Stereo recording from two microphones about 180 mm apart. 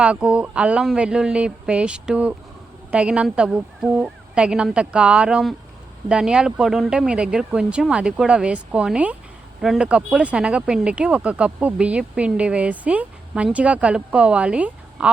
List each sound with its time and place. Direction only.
0.0 s speech: 5° right (ahead or behind)